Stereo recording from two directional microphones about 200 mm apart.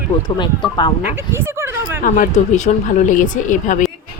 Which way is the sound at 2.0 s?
40° left (ahead or behind).